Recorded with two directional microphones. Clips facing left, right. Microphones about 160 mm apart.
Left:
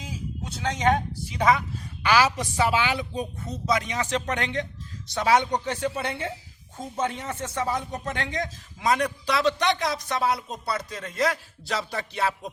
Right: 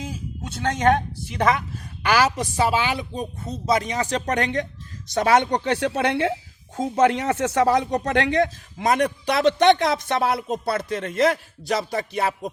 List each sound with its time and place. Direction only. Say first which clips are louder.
0.0 s a sound: right 3 dB; 55° right (ahead or behind)
1.3 s a woman's voice: right 1 dB; 55° right (ahead or behind)
2.4 s speech: right 2 dB; 35° right (ahead or behind); by 11.3 s 60° right (ahead or behind)
11.8 s speech: right 4 dB; 40° right (ahead or behind)